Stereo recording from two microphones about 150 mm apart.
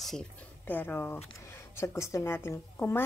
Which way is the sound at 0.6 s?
15° left (ahead or behind).